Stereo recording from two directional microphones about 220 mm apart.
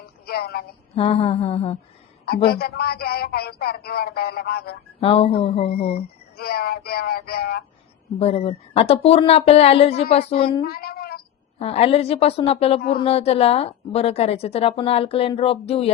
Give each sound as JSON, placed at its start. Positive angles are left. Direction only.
{"t": 0.3, "sound": "speech", "side_deg": 45}
{"t": 0.9, "sound": "a woman's voice", "side_deg": 25}
{"t": 2.5, "sound": "speech", "side_deg": 45}
{"t": 4.9, "sound": "a woman's voice", "side_deg": 25}
{"t": 6.3, "sound": "speech", "side_deg": 45}
{"t": 8.2, "sound": "a woman's voice", "side_deg": 25}
{"t": 10.6, "sound": "child singing", "side_deg": 45}
{"t": 11.6, "sound": "a woman's voice", "side_deg": 25}